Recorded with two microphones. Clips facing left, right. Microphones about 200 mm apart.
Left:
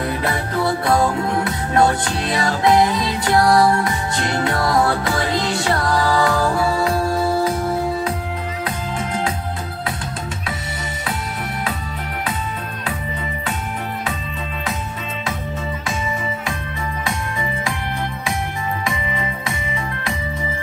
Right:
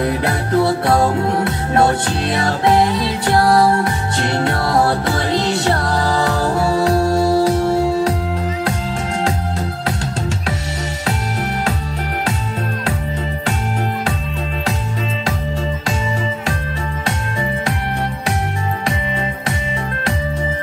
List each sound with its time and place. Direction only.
0.6 s music: 25° right (ahead or behind)
2.3 s music: 60° right (ahead or behind)
3.4 s music: 35° right (ahead or behind)
7.7 s music: 80° right